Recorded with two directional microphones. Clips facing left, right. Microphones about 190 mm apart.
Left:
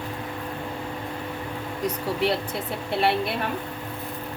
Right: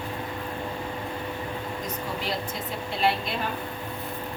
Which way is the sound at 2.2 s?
65° left (ahead or behind).